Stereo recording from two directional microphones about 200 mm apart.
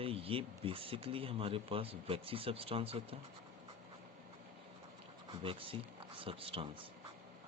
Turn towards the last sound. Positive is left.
turn(degrees=-25)  # may be behind; listen again after turning